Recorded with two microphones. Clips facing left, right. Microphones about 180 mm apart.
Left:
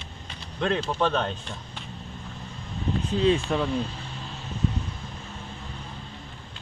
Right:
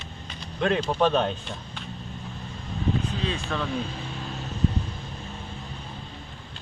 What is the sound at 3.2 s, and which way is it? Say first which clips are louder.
Speech: left 7 dB; 20° left (ahead or behind).